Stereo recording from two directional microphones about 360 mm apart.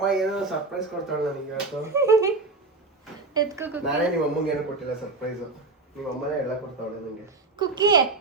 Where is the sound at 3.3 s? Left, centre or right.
Centre.